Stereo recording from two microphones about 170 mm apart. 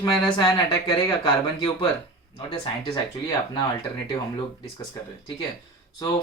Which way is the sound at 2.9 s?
25° left (ahead or behind).